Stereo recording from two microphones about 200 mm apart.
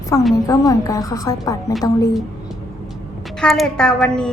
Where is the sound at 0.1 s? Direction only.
15° left (ahead or behind).